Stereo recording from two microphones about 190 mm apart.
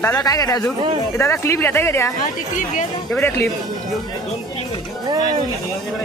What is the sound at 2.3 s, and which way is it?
Speech, 45° left (ahead or behind).